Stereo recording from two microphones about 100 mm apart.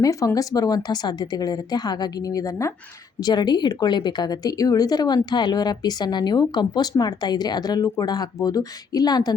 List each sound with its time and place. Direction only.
0.0 s speech: 35° left (ahead or behind)
3.2 s a woman's voice: 45° left (ahead or behind)